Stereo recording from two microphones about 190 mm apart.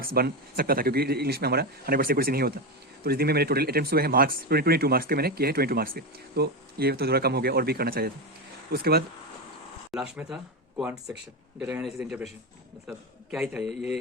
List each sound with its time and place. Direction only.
0.0 s speech: 50° right (ahead or behind)
9.9 s a man's voice: 5° right (ahead or behind)